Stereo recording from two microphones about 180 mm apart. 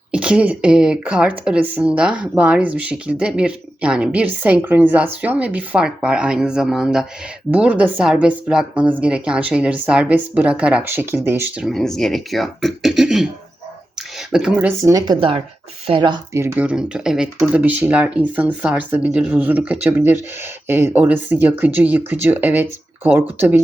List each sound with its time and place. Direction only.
0.1 s a woman's voice: 5° right (ahead or behind)
14.3 s speech: 5° right (ahead or behind)
14.9 s speech: 25° right (ahead or behind)
16.4 s speech: 10° right (ahead or behind)